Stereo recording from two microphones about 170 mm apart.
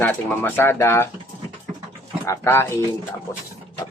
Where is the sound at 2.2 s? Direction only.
15° left (ahead or behind).